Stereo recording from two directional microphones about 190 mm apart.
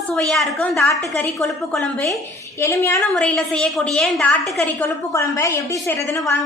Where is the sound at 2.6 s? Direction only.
15° left (ahead or behind).